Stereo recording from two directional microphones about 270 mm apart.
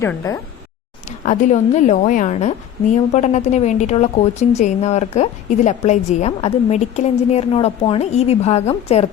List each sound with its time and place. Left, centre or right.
0.0 s speech: centre
1.0 s a woman's voice: left